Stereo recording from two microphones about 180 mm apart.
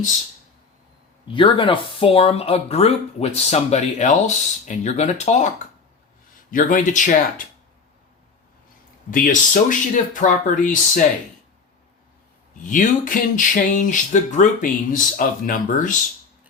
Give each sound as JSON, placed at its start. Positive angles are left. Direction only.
{"t": 1.3, "sound": "speech", "side_deg": 30}
{"t": 6.5, "sound": "speech", "side_deg": 50}
{"t": 9.0, "sound": "speech", "side_deg": 50}
{"t": 12.6, "sound": "speech", "side_deg": 45}